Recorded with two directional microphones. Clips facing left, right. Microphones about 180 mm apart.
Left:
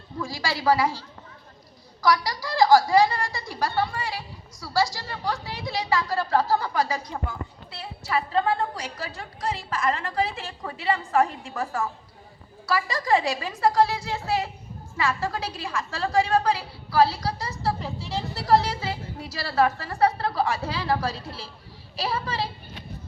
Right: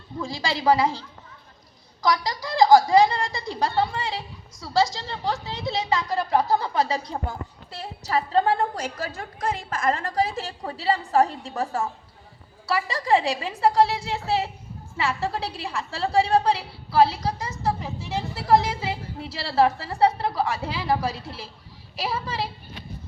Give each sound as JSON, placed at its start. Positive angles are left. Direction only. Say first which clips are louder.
{"t": 0.2, "sound": "a woman's voice", "louder": "right 1 dB", "side_deg": -20}
{"t": 12.7, "sound": "a woman's voice", "louder": "right 1 dB", "side_deg": -25}